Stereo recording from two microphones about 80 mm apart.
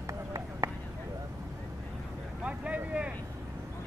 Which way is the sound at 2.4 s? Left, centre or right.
Centre.